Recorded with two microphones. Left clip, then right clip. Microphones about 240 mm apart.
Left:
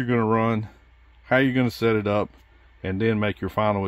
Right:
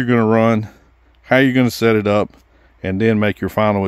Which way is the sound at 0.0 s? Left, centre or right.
Right.